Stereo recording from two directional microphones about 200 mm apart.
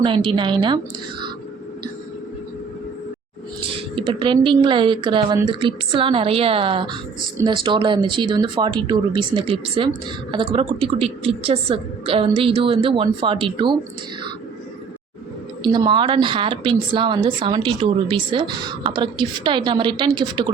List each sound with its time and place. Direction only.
0.0 s a woman's voice: 25° right (ahead or behind)
3.9 s a woman's voice: 25° right (ahead or behind)
15.6 s a woman's voice: 20° right (ahead or behind)